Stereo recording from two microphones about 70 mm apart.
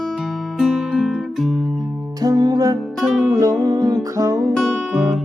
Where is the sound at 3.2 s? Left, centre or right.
Right.